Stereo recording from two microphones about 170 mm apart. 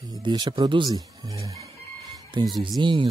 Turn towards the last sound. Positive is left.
turn(degrees=-25)  # may be behind; listen again after turning